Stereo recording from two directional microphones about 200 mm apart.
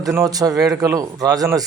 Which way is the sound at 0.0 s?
15° right (ahead or behind).